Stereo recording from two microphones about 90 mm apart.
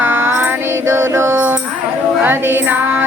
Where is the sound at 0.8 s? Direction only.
30° right (ahead or behind).